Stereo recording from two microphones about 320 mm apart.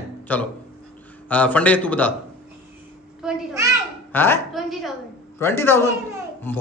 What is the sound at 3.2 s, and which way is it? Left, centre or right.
Speech, centre.